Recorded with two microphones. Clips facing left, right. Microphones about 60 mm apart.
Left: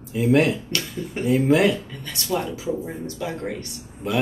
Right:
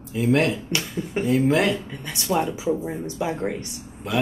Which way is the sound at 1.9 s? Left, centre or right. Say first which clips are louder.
Right 2 dB; centre.